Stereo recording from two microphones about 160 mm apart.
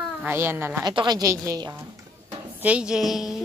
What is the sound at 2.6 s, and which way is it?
Speech, 5° right (ahead or behind).